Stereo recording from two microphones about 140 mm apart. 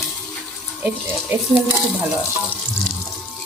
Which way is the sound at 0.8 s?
10° right (ahead or behind).